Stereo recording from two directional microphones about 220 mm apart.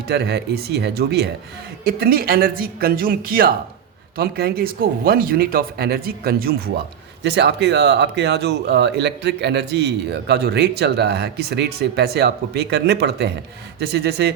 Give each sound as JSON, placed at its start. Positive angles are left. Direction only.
{"t": 0.1, "sound": "speech", "side_deg": -50}